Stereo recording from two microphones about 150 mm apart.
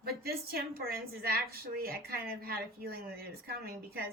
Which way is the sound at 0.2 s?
90° right.